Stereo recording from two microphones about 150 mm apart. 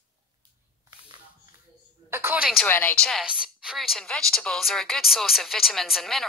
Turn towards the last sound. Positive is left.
turn(degrees=0)  # may be behind; listen again after turning